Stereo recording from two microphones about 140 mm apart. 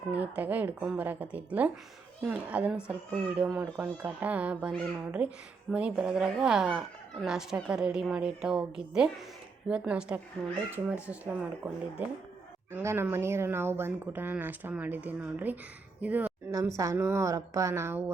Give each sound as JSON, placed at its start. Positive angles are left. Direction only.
{"t": 0.1, "sound": "a woman's voice", "side_deg": -10}
{"t": 10.4, "sound": "a woman's voice", "side_deg": 5}
{"t": 11.0, "sound": "speech", "side_deg": -10}
{"t": 16.5, "sound": "a woman's voice", "side_deg": -20}